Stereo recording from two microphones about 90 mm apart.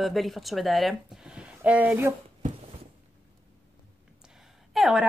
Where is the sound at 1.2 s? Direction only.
15° right (ahead or behind).